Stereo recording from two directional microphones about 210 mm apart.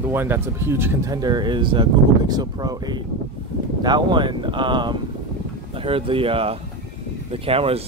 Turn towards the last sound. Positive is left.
turn(degrees=-25)  # may be behind; listen again after turning